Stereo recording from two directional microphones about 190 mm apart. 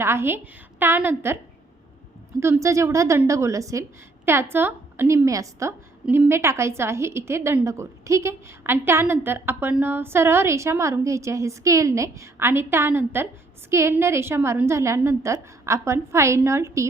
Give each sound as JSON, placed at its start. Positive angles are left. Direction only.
{"t": 0.0, "sound": "a woman's voice", "side_deg": -15}
{"t": 2.4, "sound": "a woman's voice", "side_deg": -15}